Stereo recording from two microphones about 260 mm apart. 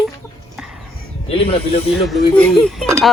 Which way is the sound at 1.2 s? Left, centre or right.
Left.